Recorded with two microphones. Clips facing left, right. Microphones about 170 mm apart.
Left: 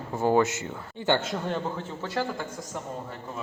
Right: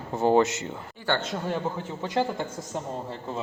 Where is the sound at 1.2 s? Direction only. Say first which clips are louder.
Even; centre (ahead or behind).